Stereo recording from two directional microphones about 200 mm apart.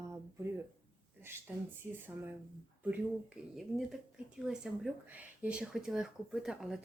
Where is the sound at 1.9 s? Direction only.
10° right (ahead or behind).